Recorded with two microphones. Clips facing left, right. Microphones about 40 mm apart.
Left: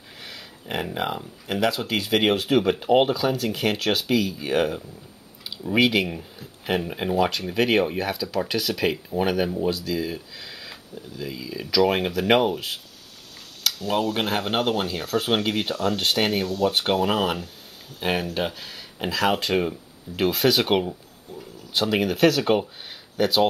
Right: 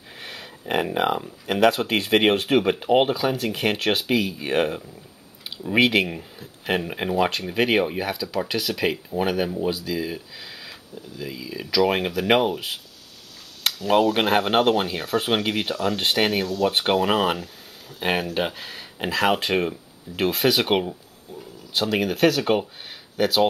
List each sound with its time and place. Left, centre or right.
0.2 s a sound: right
0.7 s speech: right
1.7 s speech: right; by 12.7 s centre
13.8 s speech: right
19.6 s speech: centre